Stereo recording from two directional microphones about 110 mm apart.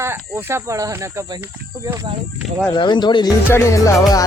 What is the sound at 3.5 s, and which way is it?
Speech, 25° left (ahead or behind).